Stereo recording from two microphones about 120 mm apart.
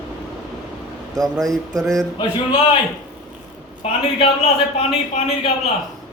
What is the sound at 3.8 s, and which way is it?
A man's voice, 55° left (ahead or behind).